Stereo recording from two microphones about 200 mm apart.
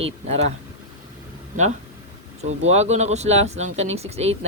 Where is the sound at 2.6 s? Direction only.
35° right (ahead or behind).